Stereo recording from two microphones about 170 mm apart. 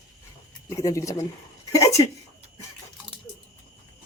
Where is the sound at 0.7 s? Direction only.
20° left (ahead or behind).